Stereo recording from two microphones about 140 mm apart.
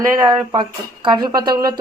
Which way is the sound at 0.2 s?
30° right (ahead or behind).